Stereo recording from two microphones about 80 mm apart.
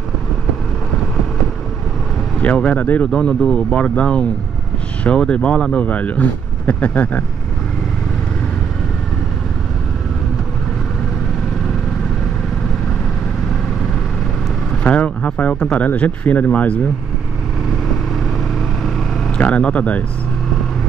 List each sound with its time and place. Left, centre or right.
2.4 s speech: centre
3.1 s speech: centre
14.7 s speech: centre
19.3 s speech: centre